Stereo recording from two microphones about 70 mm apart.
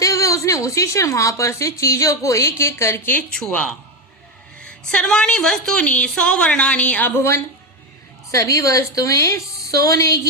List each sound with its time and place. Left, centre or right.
0.0 s a woman's voice: left
3.3 s a woman's voice: centre
7.1 s speech: left
8.3 s a woman's voice: left